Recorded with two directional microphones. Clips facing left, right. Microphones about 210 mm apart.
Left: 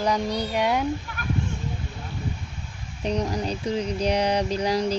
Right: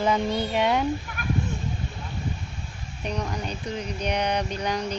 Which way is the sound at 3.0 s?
30° left (ahead or behind).